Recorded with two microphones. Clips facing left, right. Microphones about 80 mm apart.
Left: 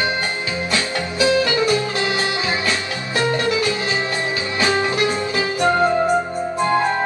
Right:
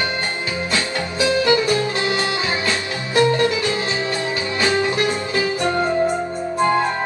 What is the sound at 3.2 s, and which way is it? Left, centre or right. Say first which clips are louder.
Music: right 4 dB; left.